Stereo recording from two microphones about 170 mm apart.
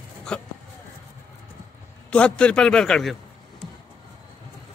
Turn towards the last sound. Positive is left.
turn(degrees=5)  # may be behind; listen again after turning